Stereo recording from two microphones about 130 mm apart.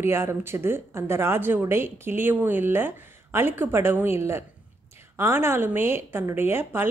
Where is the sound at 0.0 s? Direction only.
20° right (ahead or behind).